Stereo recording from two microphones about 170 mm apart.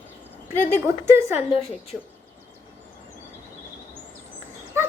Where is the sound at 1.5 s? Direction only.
35° left (ahead or behind).